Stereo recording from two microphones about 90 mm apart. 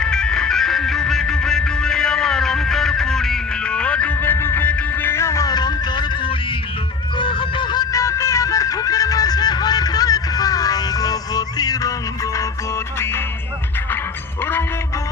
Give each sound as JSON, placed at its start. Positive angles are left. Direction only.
{"t": 0.0, "sound": "music", "side_deg": 10}
{"t": 5.5, "sound": "music", "side_deg": 50}
{"t": 7.2, "sound": "a sound", "side_deg": 65}
{"t": 7.9, "sound": "music", "side_deg": 35}